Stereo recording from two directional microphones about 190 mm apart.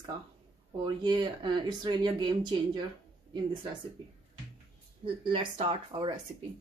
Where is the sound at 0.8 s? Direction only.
25° right (ahead or behind).